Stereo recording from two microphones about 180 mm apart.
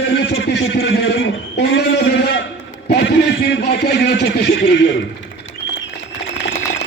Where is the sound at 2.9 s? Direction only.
70° left (ahead or behind).